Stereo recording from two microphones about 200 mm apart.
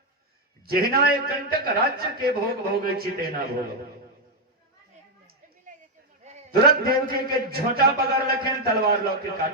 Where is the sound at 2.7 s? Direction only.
50° right (ahead or behind).